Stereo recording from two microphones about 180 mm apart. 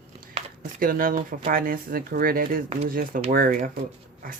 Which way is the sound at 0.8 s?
50° right (ahead or behind).